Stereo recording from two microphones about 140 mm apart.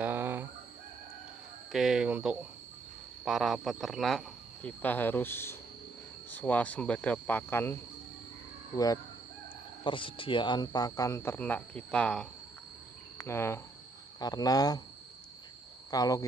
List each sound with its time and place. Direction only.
0.0 s fowl: 15° right (ahead or behind)
1.7 s a sound: centre (ahead or behind)
3.3 s speech: 5° right (ahead or behind)
4.6 s speech: 15° left (ahead or behind)
8.7 s speech: 25° left (ahead or behind)
9.8 s speech: 35° left (ahead or behind); by 12.3 s 5° left (ahead or behind)
13.2 s speech: 15° left (ahead or behind)
15.9 s speech: 25° left (ahead or behind)